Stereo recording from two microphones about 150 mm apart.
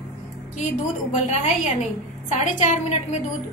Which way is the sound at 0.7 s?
50° left (ahead or behind).